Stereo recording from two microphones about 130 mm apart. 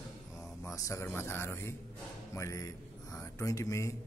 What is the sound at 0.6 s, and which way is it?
A man's voice, 25° left (ahead or behind).